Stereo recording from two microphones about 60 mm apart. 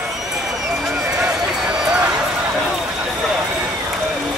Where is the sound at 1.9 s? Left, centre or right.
Centre.